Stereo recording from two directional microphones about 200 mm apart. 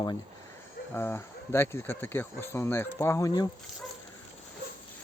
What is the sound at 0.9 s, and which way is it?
Speech, 10° left (ahead or behind).